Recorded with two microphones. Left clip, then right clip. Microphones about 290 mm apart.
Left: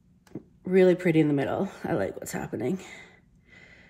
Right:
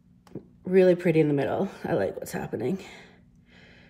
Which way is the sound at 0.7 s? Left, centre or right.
Centre.